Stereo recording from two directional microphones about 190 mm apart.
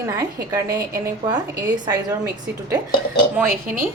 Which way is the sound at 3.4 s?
10° right (ahead or behind).